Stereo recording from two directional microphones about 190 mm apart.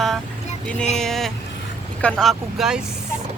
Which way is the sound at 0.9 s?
Centre (ahead or behind).